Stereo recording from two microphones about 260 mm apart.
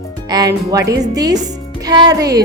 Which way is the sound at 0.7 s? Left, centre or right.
Centre.